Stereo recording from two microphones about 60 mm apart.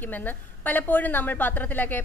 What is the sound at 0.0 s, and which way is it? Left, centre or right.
A woman's voice, left.